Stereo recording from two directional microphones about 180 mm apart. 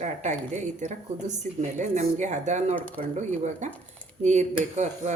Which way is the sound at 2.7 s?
10° left (ahead or behind).